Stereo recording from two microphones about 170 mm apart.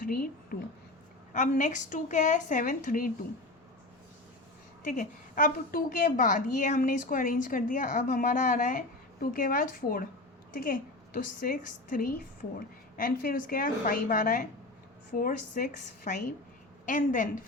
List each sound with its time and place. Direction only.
0.0 s a woman's voice: 55° left (ahead or behind)
1.3 s a woman's voice: 45° left (ahead or behind)
4.8 s a woman's voice: 50° left (ahead or behind)